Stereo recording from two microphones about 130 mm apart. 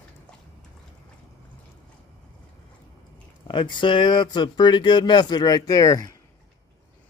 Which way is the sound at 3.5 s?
40° left (ahead or behind).